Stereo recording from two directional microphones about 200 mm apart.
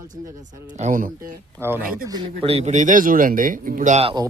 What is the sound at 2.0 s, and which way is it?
Speech, 25° right (ahead or behind).